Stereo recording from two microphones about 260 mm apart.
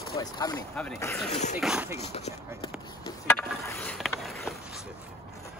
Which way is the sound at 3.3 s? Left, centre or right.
Centre.